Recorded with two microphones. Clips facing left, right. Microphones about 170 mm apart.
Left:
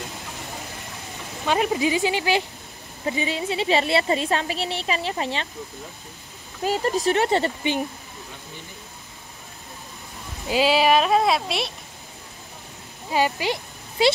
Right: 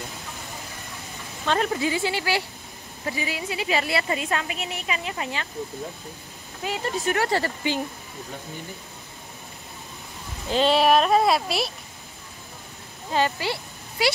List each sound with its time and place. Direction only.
1.4 s a woman's voice: 15° left (ahead or behind)
6.6 s speech: 40° left (ahead or behind)
7.2 s a woman's voice: 25° left (ahead or behind)
10.5 s speech: 5° left (ahead or behind)
13.1 s speech: 15° left (ahead or behind)